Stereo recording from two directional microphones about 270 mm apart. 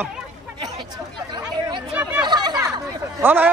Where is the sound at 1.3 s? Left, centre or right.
Centre.